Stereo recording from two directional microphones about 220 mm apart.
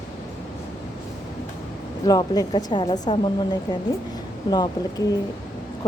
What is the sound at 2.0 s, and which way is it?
Speech, 15° left (ahead or behind).